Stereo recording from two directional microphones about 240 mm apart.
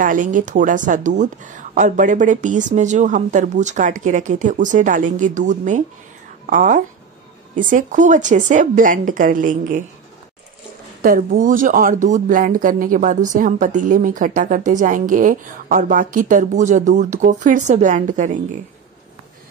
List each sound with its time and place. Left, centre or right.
0.0 s speech: right
11.0 s speech: right